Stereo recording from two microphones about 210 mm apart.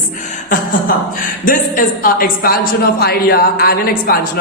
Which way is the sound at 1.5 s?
40° left (ahead or behind).